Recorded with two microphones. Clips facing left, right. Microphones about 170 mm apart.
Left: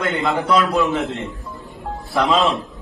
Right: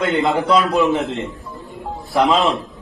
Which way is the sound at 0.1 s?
20° right (ahead or behind).